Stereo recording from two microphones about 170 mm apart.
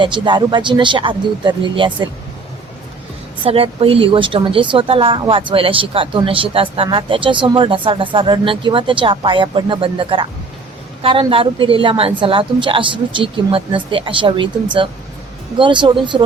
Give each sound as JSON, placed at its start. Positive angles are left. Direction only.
{"t": 0.0, "sound": "speech", "side_deg": -25}
{"t": 3.4, "sound": "speech", "side_deg": -35}